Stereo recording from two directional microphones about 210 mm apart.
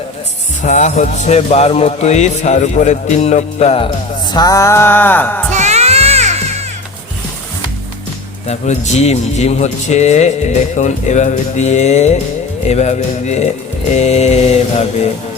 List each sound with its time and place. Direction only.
0.6 s speech: 35° left (ahead or behind)
4.3 s music: 20° left (ahead or behind)
5.5 s music: 35° right (ahead or behind)
8.4 s speech: 30° left (ahead or behind)